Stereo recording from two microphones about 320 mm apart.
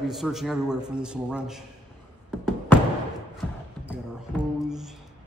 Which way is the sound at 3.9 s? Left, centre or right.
Centre.